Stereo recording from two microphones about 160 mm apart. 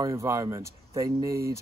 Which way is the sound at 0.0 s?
20° right (ahead or behind).